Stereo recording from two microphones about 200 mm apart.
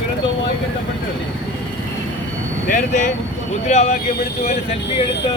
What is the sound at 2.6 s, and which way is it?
Speech, 40° left (ahead or behind).